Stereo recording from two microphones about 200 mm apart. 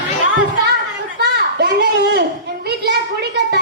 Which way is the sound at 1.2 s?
55° right (ahead or behind).